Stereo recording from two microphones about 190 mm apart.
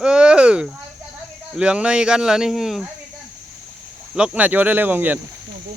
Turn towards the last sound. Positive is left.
turn(degrees=-10)  # may be behind; listen again after turning